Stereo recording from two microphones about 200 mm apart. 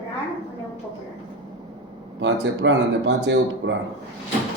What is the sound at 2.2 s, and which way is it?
A man's voice, 65° right (ahead or behind).